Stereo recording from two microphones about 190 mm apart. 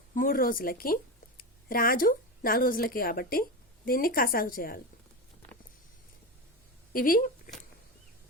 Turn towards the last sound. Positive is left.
turn(degrees=50)  # may be behind; listen again after turning